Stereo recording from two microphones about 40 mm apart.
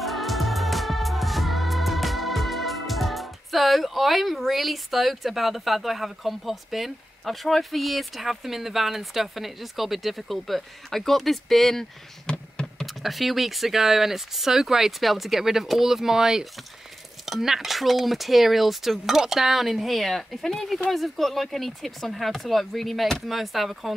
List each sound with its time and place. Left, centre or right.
0.0 s music: centre
12.3 s computer keyboard: left
12.8 s speech: centre